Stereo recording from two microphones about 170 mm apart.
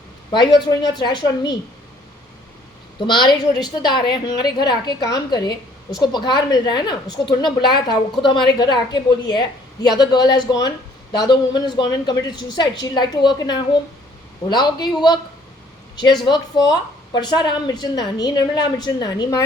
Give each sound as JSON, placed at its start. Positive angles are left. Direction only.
{"t": 0.3, "sound": "a woman's voice", "side_deg": 25}
{"t": 3.1, "sound": "a woman's voice", "side_deg": 25}
{"t": 16.2, "sound": "a woman's voice", "side_deg": 25}